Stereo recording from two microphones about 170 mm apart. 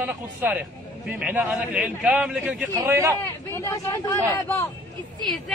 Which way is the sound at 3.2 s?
15° left (ahead or behind).